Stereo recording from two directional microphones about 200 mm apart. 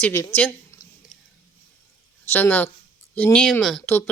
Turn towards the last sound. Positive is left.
turn(degrees=5)  # may be behind; listen again after turning